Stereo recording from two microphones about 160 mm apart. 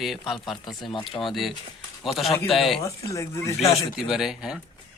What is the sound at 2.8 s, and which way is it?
Speech, 20° left (ahead or behind).